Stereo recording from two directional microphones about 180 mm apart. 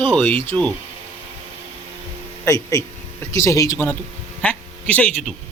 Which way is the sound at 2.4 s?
20° left (ahead or behind).